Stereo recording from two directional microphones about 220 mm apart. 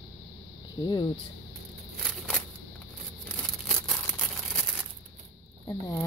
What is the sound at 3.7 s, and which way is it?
Tearing, 5° left (ahead or behind).